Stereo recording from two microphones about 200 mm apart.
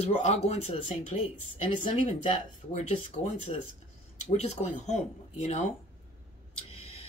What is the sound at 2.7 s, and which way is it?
Speech, 35° left (ahead or behind).